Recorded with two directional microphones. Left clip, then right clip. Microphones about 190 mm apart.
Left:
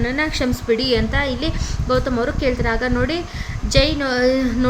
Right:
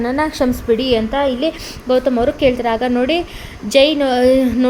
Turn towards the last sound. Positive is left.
turn(degrees=-15)  # may be behind; listen again after turning